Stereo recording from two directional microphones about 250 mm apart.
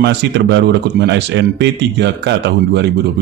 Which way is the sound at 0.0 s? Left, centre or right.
Right.